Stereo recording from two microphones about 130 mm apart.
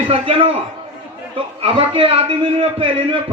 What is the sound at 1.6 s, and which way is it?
Speech, 45° right (ahead or behind).